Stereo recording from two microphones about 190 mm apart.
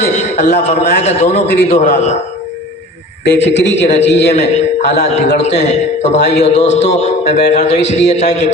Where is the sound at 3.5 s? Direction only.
65° left (ahead or behind).